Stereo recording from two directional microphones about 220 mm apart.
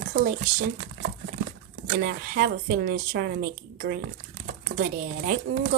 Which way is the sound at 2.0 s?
40° right (ahead or behind).